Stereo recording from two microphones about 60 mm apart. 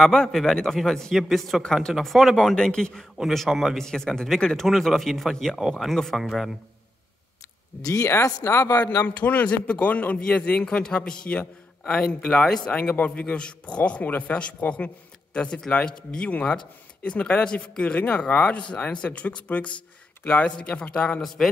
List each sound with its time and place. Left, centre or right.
0.0 s speech: centre
2.0 s speech: centre
2.3 s speech: centre
3.2 s speech: centre
3.7 s speech: centre
7.8 s speech: left
8.4 s speech: left
9.0 s speech: left